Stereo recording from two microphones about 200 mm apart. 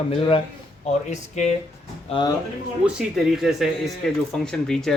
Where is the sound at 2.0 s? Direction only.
25° left (ahead or behind).